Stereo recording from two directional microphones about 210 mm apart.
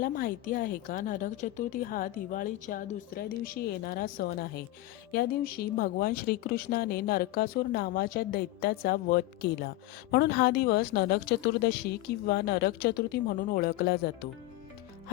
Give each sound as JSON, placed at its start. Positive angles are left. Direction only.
{"t": 0.0, "sound": "a woman's voice", "side_deg": 40}